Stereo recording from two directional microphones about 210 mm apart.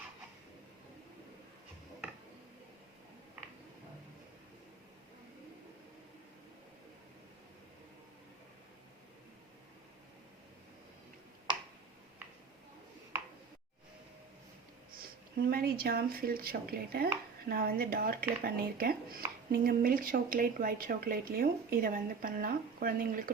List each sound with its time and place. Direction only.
15.4 s speech: 45° right (ahead or behind)